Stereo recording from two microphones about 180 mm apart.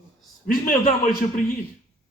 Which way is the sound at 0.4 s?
50° left (ahead or behind).